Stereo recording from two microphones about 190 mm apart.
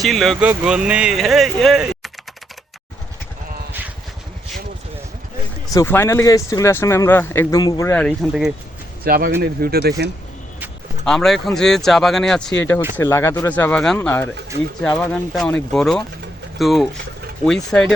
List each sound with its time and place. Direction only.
0.0 s speech: centre (ahead or behind)
3.7 s vehicle: 10° right (ahead or behind)
5.7 s speech: 15° left (ahead or behind); by 8.5 s 5° right (ahead or behind)
9.0 s speech: 50° right (ahead or behind)
11.0 s speech: centre (ahead or behind)